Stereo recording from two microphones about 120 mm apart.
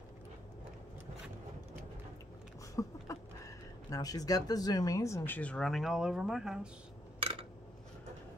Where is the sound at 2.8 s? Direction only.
25° left (ahead or behind); by 6.7 s 5° right (ahead or behind).